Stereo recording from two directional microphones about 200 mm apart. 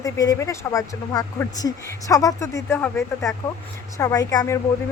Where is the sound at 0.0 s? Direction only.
15° left (ahead or behind).